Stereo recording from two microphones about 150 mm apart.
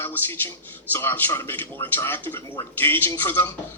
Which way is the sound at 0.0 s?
15° left (ahead or behind).